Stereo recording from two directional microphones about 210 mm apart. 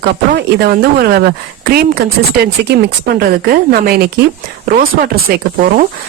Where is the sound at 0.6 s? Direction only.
50° right (ahead or behind).